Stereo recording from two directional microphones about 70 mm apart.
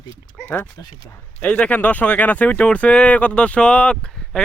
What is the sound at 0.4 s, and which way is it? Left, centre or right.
Speech, left.